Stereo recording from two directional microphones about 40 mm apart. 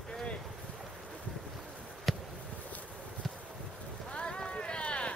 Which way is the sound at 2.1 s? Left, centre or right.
Centre.